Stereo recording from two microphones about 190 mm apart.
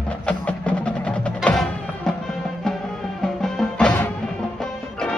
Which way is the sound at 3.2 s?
5° left (ahead or behind).